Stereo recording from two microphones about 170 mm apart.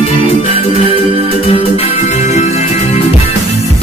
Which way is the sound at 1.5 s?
40° left (ahead or behind).